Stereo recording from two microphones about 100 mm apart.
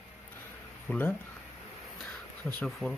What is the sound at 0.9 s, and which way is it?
Speech, 15° left (ahead or behind).